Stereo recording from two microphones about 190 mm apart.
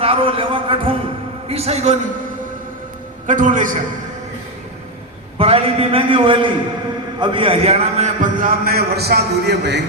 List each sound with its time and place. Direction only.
0.0 s a man's voice: 30° right (ahead or behind)
3.2 s a man's voice: 40° right (ahead or behind)
5.4 s a man's voice: 30° right (ahead or behind); by 9.8 s 60° right (ahead or behind)